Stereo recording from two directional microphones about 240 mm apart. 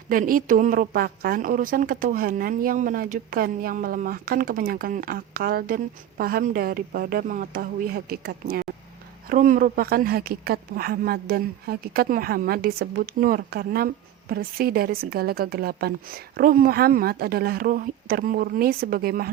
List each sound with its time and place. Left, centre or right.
0.1 s speech: right